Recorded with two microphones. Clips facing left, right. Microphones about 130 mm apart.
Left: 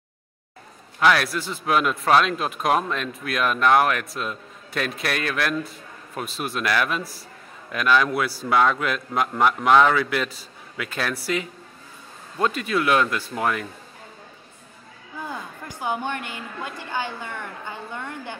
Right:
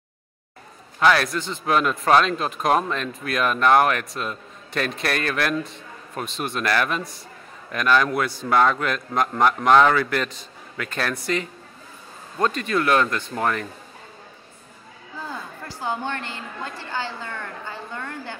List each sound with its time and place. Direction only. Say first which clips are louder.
0.9 s a man's voice: right 1 dB; centre (ahead or behind)
15.1 s a woman's voice: left 1 dB; 15° left (ahead or behind)